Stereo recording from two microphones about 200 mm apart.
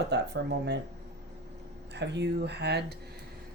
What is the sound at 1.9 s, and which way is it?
Speech, 60° right (ahead or behind).